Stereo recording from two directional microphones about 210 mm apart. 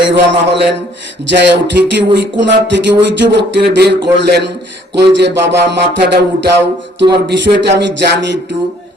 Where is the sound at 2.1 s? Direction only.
55° right (ahead or behind).